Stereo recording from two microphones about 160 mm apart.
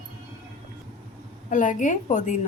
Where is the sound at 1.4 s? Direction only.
50° left (ahead or behind).